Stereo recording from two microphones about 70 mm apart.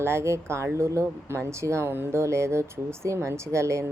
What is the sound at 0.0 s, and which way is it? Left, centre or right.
Speech, right.